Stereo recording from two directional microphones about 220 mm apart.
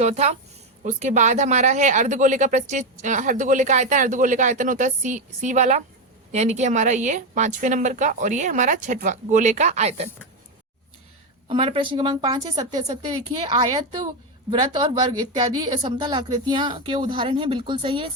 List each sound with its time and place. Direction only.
0.0 s speech: 30° right (ahead or behind)
11.4 s a woman's voice: 25° right (ahead or behind)
13.2 s a woman's voice: 30° right (ahead or behind)